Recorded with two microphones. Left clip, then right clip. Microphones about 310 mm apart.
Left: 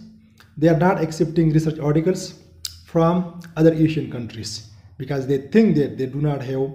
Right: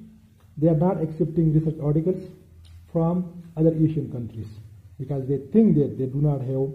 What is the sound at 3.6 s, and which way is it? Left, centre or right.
Speech, centre.